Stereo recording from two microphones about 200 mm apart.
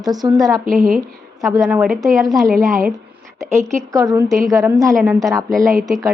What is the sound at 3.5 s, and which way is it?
A woman's voice, 15° right (ahead or behind).